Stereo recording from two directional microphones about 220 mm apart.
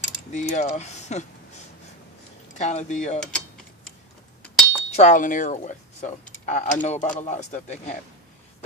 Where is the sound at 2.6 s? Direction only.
30° left (ahead or behind).